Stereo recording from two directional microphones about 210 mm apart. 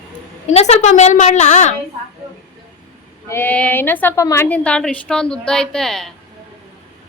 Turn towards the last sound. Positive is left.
turn(degrees=0)  # may be behind; listen again after turning